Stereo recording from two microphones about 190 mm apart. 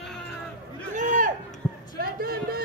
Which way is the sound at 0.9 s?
40° right (ahead or behind).